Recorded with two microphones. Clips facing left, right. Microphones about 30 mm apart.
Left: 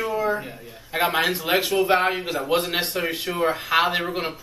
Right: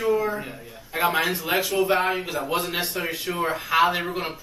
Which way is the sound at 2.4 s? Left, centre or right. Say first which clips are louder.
Left 3 dB; left.